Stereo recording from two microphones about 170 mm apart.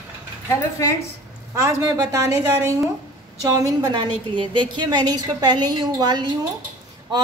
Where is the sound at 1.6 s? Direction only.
20° right (ahead or behind).